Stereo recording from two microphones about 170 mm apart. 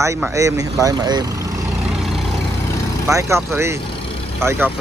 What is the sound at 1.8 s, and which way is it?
Vehicle, centre (ahead or behind).